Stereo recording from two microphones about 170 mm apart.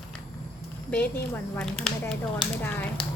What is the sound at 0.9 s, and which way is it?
Speech, 10° left (ahead or behind).